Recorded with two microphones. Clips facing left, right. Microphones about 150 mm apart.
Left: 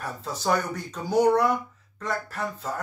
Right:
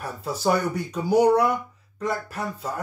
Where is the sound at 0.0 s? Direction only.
10° right (ahead or behind).